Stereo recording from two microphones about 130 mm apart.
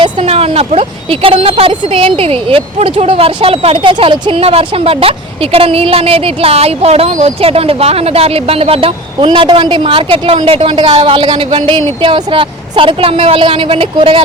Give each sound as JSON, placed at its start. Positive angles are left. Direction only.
{"t": 0.2, "sound": "a woman's voice", "side_deg": -50}